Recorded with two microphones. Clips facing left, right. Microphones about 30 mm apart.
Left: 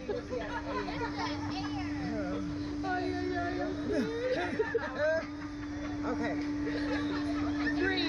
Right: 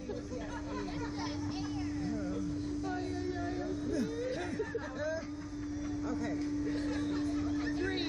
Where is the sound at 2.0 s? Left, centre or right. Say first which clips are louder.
Left 1 dB; left.